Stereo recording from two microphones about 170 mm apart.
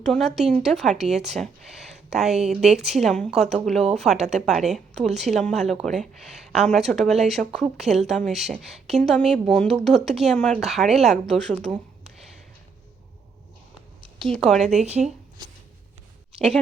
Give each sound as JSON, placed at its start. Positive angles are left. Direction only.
{"t": 0.0, "sound": "speech", "side_deg": 0}
{"t": 4.2, "sound": "speech", "side_deg": -40}
{"t": 4.4, "sound": "speech", "side_deg": 0}
{"t": 14.0, "sound": "speech", "side_deg": 0}